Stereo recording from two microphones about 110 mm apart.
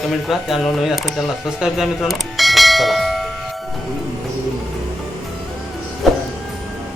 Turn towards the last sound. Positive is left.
turn(degrees=0)  # may be behind; listen again after turning